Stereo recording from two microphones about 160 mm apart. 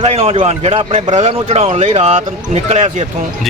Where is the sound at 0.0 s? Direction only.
40° right (ahead or behind).